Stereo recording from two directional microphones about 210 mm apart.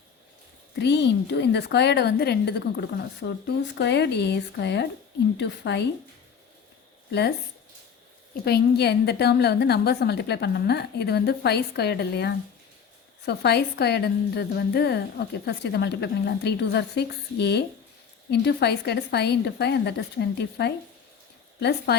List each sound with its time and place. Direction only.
0.8 s a woman's voice: 55° left (ahead or behind)
8.4 s a woman's voice: 50° left (ahead or behind)